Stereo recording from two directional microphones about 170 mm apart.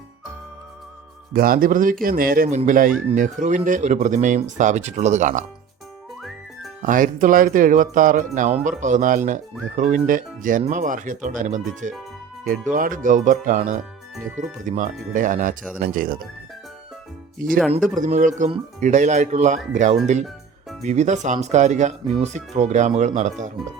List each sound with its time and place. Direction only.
1.3 s speech: 60° right (ahead or behind)
6.8 s speech: 50° right (ahead or behind)
17.3 s speech: 55° right (ahead or behind)